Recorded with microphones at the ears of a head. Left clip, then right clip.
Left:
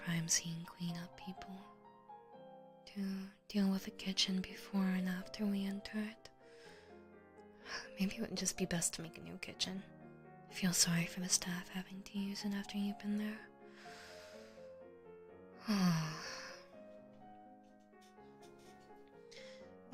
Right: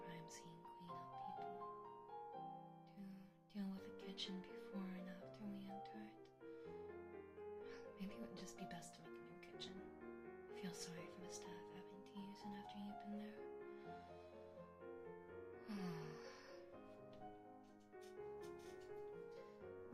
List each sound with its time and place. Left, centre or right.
0.0 s speech: left
2.9 s speech: left
7.7 s speech: left
15.6 s music: left